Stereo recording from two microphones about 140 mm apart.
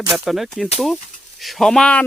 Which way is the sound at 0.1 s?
Centre (ahead or behind).